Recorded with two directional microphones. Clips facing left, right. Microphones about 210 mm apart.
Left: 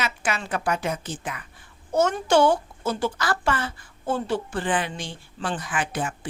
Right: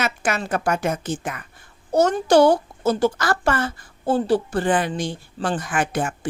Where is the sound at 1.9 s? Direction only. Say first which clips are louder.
Right 4 dB; 35° right (ahead or behind).